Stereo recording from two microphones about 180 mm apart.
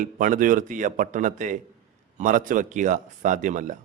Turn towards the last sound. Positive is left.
turn(degrees=-45)  # may be behind; listen again after turning